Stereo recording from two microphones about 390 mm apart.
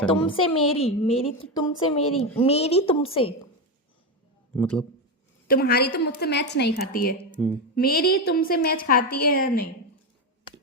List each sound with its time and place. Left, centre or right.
0.0 s a woman's voice: centre
4.5 s speech: centre
5.5 s a woman's voice: left